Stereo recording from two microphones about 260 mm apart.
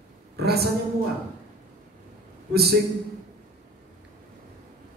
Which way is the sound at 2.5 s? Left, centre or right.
Right.